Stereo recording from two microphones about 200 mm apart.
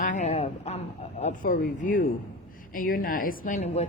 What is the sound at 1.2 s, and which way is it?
A woman's voice, 40° left (ahead or behind).